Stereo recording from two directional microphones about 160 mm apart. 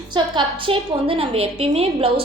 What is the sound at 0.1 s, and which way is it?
A woman's voice, 30° right (ahead or behind).